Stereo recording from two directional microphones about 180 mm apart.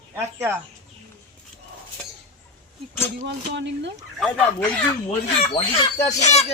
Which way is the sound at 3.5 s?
80° right.